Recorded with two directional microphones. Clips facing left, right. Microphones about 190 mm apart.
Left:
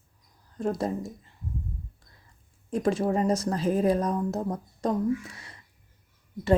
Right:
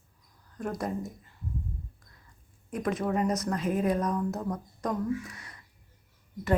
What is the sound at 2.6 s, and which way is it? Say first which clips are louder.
A woman's voice: left 4 dB; 30° left (ahead or behind).